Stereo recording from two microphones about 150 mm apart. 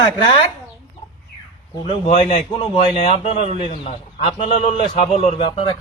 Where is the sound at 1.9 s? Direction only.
50° left (ahead or behind).